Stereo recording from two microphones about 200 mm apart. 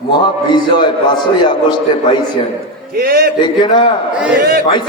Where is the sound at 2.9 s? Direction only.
50° right (ahead or behind).